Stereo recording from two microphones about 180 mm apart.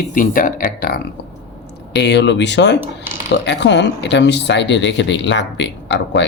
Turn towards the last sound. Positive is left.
turn(degrees=80)